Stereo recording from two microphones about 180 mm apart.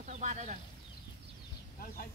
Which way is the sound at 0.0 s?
40° right (ahead or behind).